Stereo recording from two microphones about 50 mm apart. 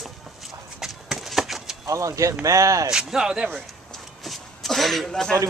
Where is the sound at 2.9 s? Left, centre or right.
Centre.